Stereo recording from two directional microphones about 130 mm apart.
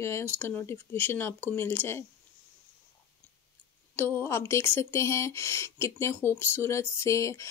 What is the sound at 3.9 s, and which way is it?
Speech, 20° left (ahead or behind).